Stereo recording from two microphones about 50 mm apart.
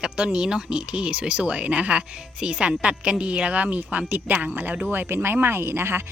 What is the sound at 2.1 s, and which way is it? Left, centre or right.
Speech, centre.